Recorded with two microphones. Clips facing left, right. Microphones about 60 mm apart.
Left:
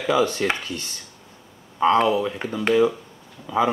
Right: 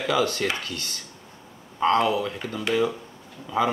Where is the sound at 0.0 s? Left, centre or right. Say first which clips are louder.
Left 3 dB; left.